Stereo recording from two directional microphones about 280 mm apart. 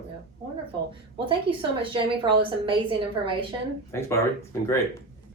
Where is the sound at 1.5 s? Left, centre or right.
Centre.